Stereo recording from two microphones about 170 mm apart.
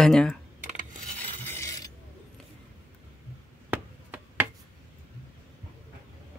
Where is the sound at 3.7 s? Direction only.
10° right (ahead or behind).